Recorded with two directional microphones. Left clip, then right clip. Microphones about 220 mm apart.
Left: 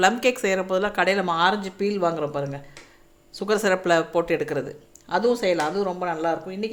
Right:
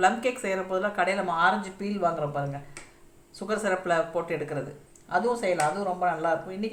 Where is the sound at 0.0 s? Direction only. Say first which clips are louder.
Left 4 dB; 50° left (ahead or behind).